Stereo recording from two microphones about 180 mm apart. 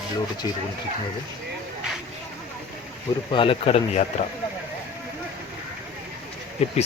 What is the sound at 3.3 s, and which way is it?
Speech, 30° left (ahead or behind).